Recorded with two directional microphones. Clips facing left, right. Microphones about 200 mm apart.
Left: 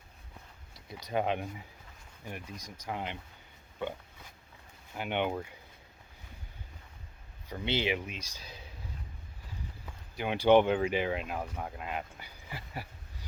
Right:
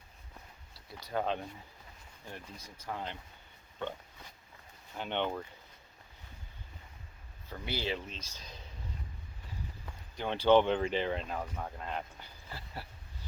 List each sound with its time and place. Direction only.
0.7 s speech: 20° left (ahead or behind)
4.9 s speech: 10° left (ahead or behind)
7.4 s speech: 20° left (ahead or behind)
9.8 s speech: 10° left (ahead or behind)